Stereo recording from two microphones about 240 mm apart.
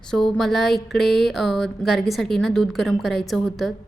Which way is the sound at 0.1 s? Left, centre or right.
Centre.